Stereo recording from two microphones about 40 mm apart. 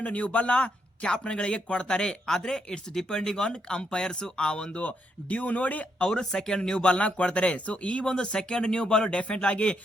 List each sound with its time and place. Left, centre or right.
0.0 s speech: left
4.8 s speech: left
6.0 s speech: centre